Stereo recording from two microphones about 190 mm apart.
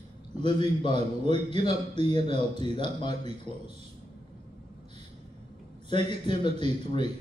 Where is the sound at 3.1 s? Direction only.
35° right (ahead or behind).